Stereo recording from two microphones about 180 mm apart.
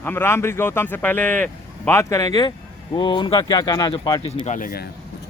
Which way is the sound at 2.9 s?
25° left (ahead or behind).